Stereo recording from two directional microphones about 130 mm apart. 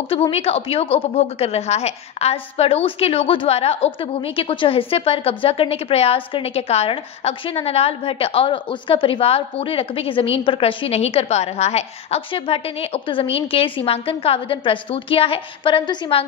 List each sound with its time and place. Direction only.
0.1 s a woman's voice: 45° left (ahead or behind)